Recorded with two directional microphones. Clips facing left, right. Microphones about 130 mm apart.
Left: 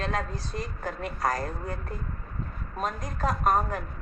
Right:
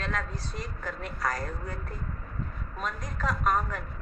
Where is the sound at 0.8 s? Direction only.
45° left (ahead or behind).